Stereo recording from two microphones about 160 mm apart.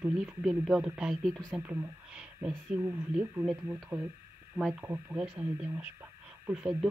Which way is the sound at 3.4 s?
Centre (ahead or behind).